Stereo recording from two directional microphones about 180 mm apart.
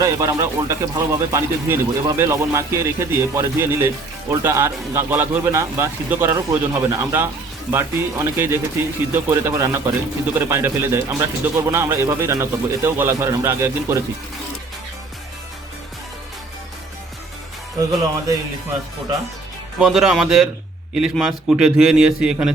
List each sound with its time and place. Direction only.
0.0 s speech: 20° right (ahead or behind)
19.8 s a man's voice: 5° right (ahead or behind)